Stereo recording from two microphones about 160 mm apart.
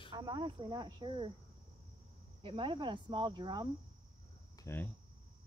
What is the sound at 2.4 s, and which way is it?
Speech, 30° right (ahead or behind).